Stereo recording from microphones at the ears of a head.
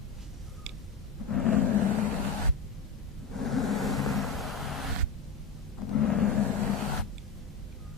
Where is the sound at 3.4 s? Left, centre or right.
Left.